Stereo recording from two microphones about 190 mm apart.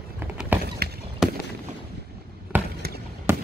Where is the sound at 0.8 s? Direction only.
55° right (ahead or behind).